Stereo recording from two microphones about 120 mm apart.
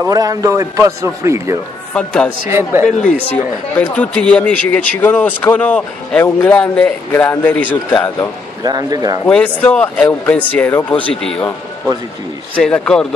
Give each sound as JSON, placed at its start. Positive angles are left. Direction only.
{"t": 0.0, "sound": "a man's voice", "side_deg": -30}
{"t": 2.0, "sound": "a man's voice", "side_deg": 10}
{"t": 3.0, "sound": "speech", "side_deg": 90}
{"t": 3.7, "sound": "a man's voice", "side_deg": 10}
{"t": 8.6, "sound": "speech", "side_deg": -30}
{"t": 9.3, "sound": "a man's voice", "side_deg": 10}
{"t": 12.5, "sound": "a man's voice", "side_deg": 10}